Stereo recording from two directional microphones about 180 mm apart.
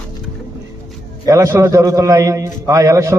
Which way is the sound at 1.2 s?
15° right (ahead or behind).